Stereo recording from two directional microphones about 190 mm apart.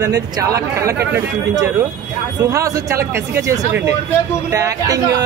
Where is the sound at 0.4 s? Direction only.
20° right (ahead or behind).